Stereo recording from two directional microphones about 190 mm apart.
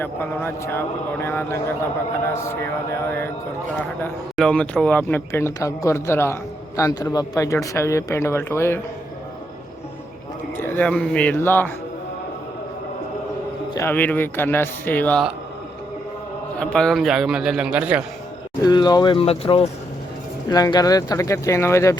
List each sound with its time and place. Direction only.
0.0 s speech: 10° left (ahead or behind)
4.4 s speech: 5° left (ahead or behind)
10.7 s speech: 5° left (ahead or behind)
13.7 s speech: 10° left (ahead or behind)
16.6 s a man's voice: 5° left (ahead or behind)
18.6 s speech: 20° left (ahead or behind)
20.5 s speech: 20° left (ahead or behind)